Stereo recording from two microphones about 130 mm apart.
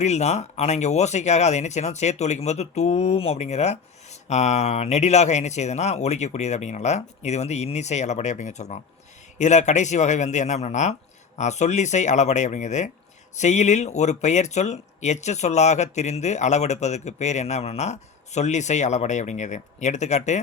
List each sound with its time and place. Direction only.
0.0 s speech: 60° left (ahead or behind)